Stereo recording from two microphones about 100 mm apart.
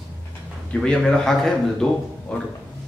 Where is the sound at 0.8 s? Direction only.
10° left (ahead or behind).